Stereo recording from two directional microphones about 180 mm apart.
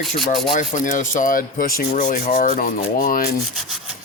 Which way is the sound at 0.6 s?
45° left (ahead or behind).